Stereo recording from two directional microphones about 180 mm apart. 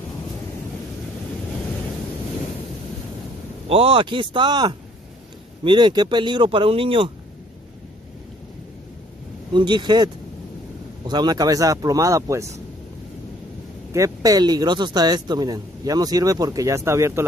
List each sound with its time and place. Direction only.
3.6 s speech: 30° right (ahead or behind)
9.5 s speech: 25° right (ahead or behind)
13.9 s speech: 20° right (ahead or behind)